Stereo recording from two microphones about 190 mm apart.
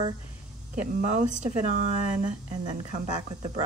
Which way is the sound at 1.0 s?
40° right (ahead or behind).